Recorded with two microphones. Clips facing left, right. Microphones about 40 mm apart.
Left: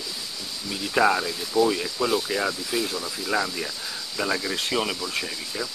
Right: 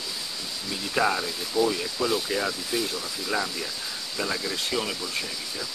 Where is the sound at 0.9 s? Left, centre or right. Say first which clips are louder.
Left 4 dB; centre.